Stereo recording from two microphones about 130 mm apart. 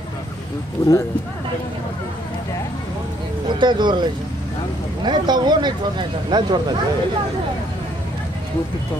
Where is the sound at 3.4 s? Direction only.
35° right (ahead or behind).